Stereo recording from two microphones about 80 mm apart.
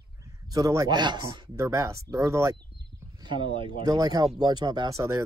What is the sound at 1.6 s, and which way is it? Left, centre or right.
Speech, right.